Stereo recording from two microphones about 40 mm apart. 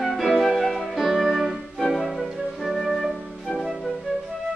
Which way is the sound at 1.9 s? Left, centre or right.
Centre.